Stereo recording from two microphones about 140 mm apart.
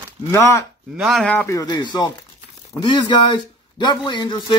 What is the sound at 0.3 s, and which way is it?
Speech, 20° left (ahead or behind).